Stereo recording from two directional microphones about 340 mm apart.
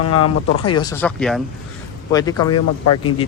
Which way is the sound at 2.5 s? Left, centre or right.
Left.